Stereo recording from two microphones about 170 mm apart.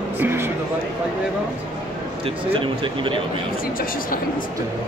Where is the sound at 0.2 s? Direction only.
15° right (ahead or behind).